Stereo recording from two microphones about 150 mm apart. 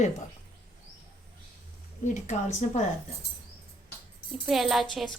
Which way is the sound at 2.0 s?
55° left (ahead or behind).